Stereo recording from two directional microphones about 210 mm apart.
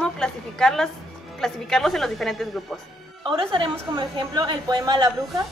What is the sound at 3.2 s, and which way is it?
A woman's voice, 25° right (ahead or behind).